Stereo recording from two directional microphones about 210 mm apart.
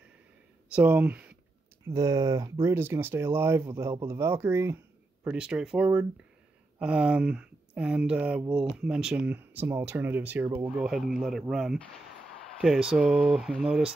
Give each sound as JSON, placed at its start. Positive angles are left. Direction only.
{"t": 0.7, "sound": "speech", "side_deg": -10}